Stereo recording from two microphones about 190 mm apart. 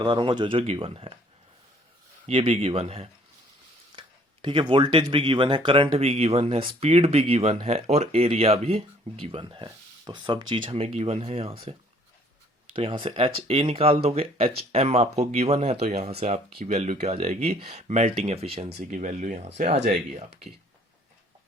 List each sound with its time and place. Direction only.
0.0 s speech: 25° right (ahead or behind)
2.2 s speech: 30° right (ahead or behind)
4.4 s speech: 25° right (ahead or behind)
12.7 s speech: 25° right (ahead or behind)
18.8 s speech: 45° right (ahead or behind)